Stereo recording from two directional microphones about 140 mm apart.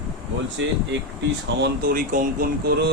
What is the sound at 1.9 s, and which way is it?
Speech, 80° right.